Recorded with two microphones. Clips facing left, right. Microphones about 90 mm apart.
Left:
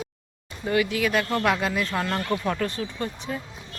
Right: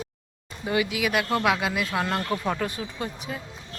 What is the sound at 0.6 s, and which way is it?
Speech, 10° right (ahead or behind).